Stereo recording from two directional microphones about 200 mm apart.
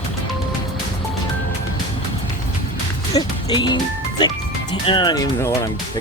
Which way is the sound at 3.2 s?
20° left (ahead or behind).